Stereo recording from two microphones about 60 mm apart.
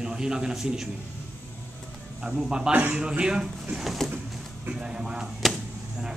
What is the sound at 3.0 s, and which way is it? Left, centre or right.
Speech, centre.